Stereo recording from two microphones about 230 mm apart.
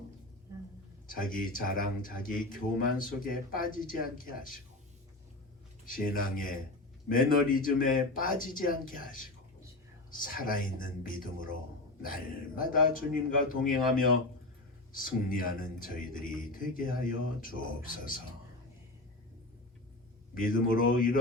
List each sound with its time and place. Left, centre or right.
1.0 s speech: left
5.8 s speech: left
20.3 s speech: left